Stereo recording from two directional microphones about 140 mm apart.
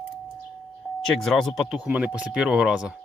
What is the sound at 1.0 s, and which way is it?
Speech, centre (ahead or behind).